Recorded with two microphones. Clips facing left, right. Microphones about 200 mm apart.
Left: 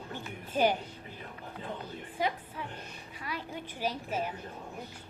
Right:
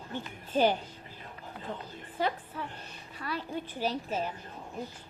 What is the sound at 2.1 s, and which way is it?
A woman's voice, 10° left (ahead or behind).